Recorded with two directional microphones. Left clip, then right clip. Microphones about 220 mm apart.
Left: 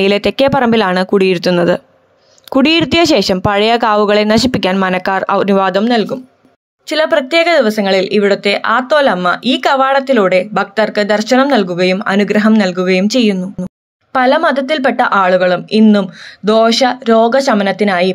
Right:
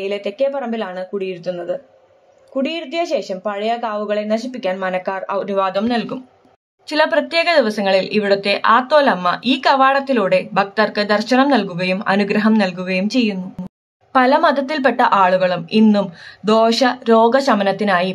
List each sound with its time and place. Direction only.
0.0 s speech: 35° left (ahead or behind); by 18.1 s 15° left (ahead or behind)